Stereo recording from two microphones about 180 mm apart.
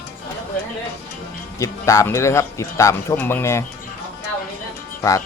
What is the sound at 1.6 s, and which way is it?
Speech, 15° left (ahead or behind).